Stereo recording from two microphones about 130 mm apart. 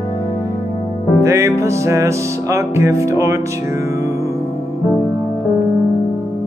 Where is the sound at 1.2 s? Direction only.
25° right (ahead or behind).